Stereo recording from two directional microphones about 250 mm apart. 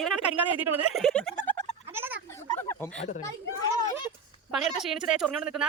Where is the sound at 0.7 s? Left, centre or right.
Right.